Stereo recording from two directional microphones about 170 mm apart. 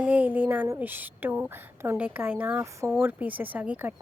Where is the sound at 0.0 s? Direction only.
10° right (ahead or behind).